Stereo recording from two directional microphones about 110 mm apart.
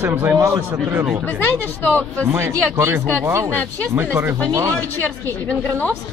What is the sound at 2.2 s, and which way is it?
Speech, 25° right (ahead or behind).